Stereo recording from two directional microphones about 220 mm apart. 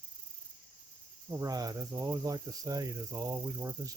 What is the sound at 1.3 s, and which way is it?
Speech, 15° right (ahead or behind).